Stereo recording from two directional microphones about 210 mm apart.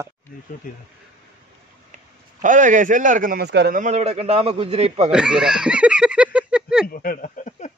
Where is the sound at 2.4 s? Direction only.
40° right (ahead or behind).